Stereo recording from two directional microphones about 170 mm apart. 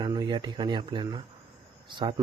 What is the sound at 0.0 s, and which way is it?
Speech, 25° right (ahead or behind).